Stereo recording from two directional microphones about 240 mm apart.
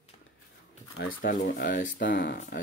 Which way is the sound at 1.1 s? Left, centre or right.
Left.